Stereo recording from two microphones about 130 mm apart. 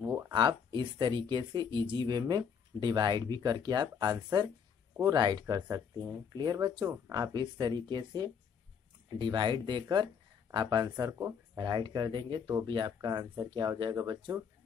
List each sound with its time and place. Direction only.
0.3 s speech: 35° right (ahead or behind)